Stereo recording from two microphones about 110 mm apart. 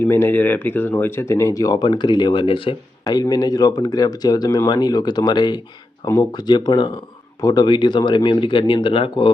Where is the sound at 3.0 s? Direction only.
35° left (ahead or behind).